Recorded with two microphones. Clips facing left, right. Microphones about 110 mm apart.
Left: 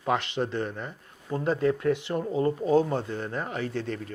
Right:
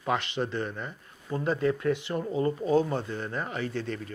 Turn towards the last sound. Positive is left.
turn(degrees=50)  # may be behind; listen again after turning